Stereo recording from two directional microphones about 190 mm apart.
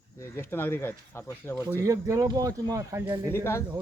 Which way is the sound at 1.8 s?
15° right (ahead or behind).